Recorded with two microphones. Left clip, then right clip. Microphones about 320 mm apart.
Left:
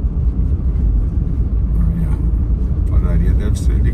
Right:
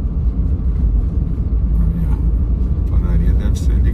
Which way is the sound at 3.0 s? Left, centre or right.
Centre.